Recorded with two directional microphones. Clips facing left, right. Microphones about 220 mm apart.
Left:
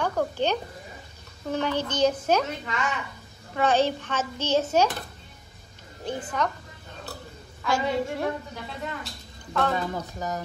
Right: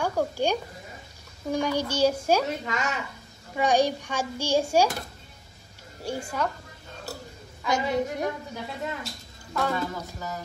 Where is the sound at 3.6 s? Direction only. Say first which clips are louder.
Even; 15° right (ahead or behind).